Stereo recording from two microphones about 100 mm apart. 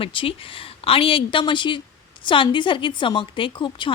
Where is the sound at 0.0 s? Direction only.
65° left (ahead or behind).